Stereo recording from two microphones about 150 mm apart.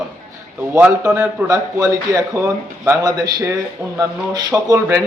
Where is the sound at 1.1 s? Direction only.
20° right (ahead or behind).